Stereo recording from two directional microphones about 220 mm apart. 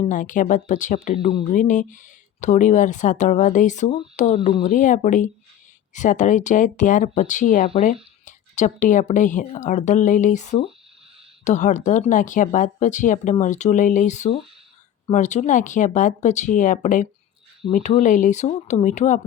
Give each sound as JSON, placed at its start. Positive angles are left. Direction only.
{"t": 0.0, "sound": "a woman's voice", "side_deg": 35}